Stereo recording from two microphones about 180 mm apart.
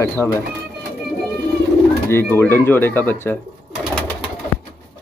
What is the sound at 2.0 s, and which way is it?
Speech, 15° left (ahead or behind).